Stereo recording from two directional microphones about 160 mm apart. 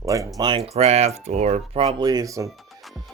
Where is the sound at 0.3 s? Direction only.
30° right (ahead or behind).